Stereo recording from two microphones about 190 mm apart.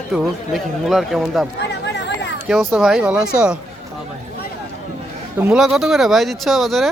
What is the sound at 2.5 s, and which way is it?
Speech, centre (ahead or behind).